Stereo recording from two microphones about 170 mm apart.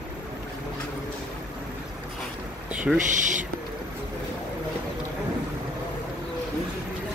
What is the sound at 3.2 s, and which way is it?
Speech, 50° right (ahead or behind).